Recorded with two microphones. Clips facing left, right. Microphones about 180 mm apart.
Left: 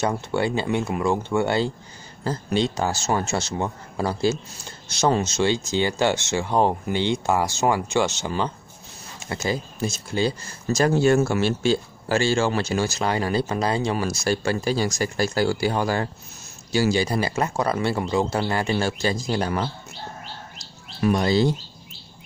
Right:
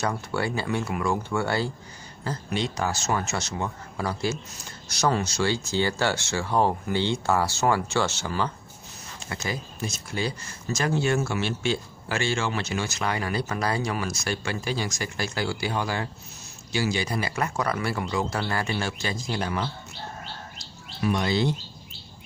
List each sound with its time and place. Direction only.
0.0 s speech: 20° left (ahead or behind)
9.3 s speech: 30° left (ahead or behind)
21.0 s speech: 40° left (ahead or behind)